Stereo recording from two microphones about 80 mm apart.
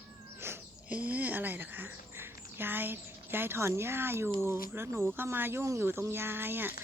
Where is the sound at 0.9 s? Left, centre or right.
Centre.